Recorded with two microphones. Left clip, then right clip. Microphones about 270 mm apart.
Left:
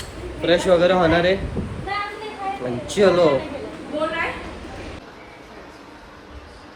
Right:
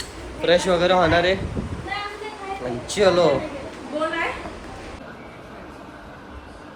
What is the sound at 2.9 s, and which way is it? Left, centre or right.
Speech, centre.